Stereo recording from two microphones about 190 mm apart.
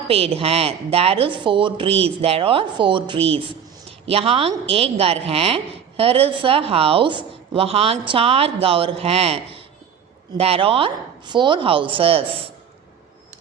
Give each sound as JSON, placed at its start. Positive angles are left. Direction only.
{"t": 0.1, "sound": "a woman's voice", "side_deg": -30}